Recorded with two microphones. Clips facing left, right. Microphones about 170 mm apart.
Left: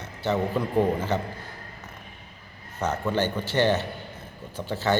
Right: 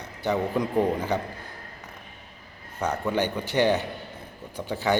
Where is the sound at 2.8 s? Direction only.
15° right (ahead or behind).